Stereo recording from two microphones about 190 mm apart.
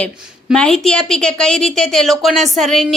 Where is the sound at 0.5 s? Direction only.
5° left (ahead or behind).